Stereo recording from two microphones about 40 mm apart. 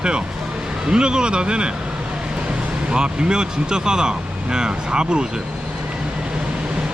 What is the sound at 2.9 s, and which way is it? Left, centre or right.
Speech, right.